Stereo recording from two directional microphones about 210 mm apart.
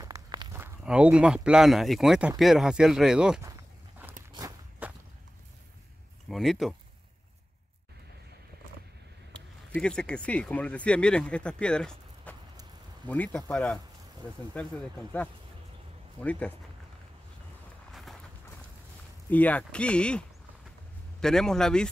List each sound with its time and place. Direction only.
0.0 s speech: 20° right (ahead or behind)
4.3 s walk: 15° right (ahead or behind)
6.2 s speech: centre (ahead or behind)
9.3 s speech: 5° left (ahead or behind)
19.3 s speech: 5° left (ahead or behind)